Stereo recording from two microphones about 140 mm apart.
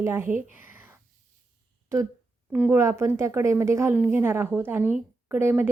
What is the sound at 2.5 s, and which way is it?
A woman's voice, 15° right (ahead or behind).